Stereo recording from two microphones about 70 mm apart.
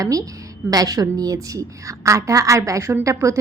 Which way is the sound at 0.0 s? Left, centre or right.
Right.